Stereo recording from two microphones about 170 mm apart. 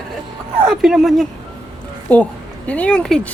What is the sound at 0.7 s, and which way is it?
A woman's voice, centre (ahead or behind).